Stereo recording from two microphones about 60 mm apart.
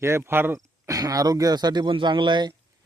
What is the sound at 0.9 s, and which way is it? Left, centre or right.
Speech, right.